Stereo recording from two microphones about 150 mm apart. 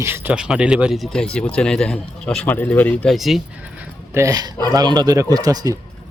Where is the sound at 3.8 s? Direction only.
20° right (ahead or behind).